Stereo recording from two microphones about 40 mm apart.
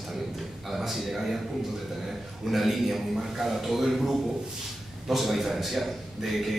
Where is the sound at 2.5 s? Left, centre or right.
Centre.